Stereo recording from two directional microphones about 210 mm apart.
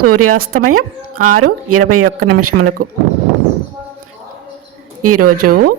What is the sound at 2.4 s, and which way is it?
Speech, 90° right.